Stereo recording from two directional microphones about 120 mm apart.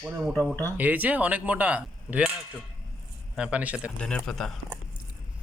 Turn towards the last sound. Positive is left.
turn(degrees=5)  # may be behind; listen again after turning